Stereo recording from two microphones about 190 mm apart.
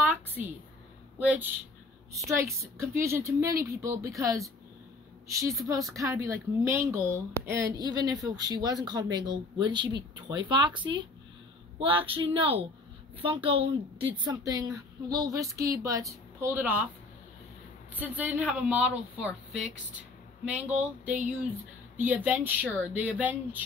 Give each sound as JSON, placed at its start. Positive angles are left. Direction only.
{"t": 0.0, "sound": "a sound", "side_deg": -10}
{"t": 1.2, "sound": "a woman's voice", "side_deg": -10}
{"t": 5.9, "sound": "a woman's voice", "side_deg": -15}
{"t": 17.9, "sound": "a woman's voice", "side_deg": -10}